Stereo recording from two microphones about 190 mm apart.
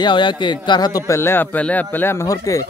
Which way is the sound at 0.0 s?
25° left (ahead or behind).